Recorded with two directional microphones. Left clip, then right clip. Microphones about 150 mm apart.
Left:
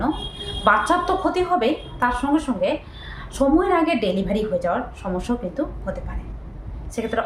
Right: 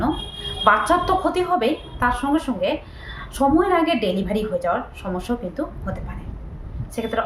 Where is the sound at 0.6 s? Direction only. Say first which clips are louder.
Right 1 dB; 5° right (ahead or behind).